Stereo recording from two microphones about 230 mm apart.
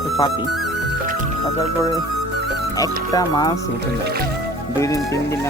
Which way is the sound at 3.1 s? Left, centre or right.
Centre.